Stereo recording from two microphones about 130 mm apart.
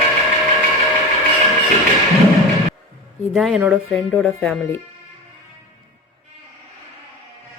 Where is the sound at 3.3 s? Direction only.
Centre (ahead or behind).